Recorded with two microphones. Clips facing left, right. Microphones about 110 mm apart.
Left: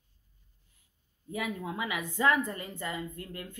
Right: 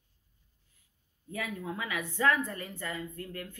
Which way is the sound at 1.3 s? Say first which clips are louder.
Left 2 dB; 15° left (ahead or behind).